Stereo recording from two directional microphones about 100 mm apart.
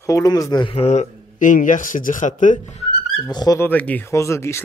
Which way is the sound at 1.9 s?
90° left.